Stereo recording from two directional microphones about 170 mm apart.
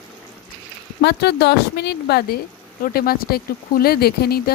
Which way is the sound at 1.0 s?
70° left (ahead or behind).